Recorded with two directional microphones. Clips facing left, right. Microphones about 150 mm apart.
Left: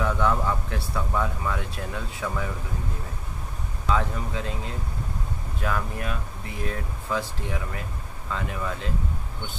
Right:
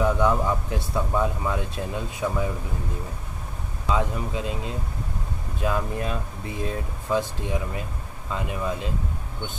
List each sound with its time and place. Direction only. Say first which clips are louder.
0.0 s speech: right 3 dB; 15° right (ahead or behind)
3.9 s speech: right 1 dB; 20° right (ahead or behind)